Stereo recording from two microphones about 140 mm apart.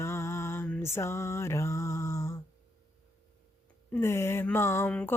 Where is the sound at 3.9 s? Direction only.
20° left (ahead or behind).